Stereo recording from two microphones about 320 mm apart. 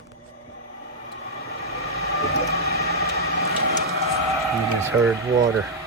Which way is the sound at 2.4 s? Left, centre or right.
Right.